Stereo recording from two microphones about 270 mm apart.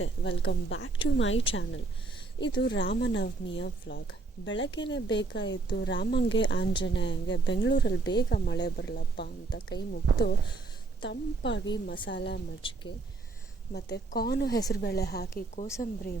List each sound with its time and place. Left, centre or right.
0.0 s a woman's voice: left
2.6 s speech: left
12.6 s speech: centre
13.7 s speech: left